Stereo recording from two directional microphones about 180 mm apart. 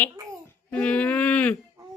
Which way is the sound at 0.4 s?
5° left (ahead or behind).